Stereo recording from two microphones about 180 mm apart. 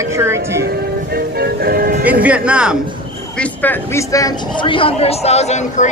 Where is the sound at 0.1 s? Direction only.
15° right (ahead or behind).